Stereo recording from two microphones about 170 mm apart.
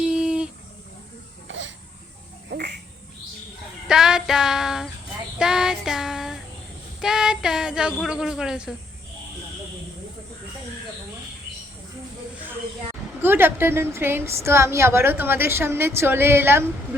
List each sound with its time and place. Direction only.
0.0 s a sound: 5° right (ahead or behind)
1.5 s a sound: 90° right
2.5 s insect: 75° right (ahead or behind)
3.8 s child singing: 5° right (ahead or behind)
7.0 s speech: 5° right (ahead or behind)
13.2 s a woman's voice: 15° right (ahead or behind)